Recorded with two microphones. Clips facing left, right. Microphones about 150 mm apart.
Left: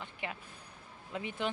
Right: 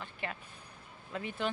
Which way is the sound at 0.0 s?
15° left (ahead or behind).